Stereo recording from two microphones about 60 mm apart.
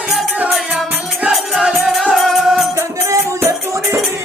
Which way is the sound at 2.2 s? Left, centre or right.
Centre.